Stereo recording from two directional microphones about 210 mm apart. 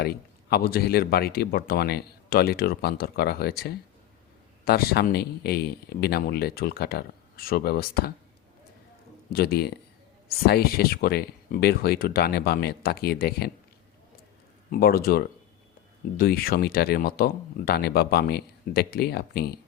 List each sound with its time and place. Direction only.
0.5 s speech: 45° left (ahead or behind)
9.3 s speech: 50° left (ahead or behind)
14.7 s speech: 45° left (ahead or behind)